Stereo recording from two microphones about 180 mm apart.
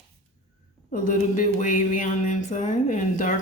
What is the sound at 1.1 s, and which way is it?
A woman's voice, 45° left (ahead or behind).